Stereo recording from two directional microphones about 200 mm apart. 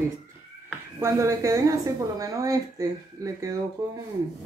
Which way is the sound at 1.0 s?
15° right (ahead or behind).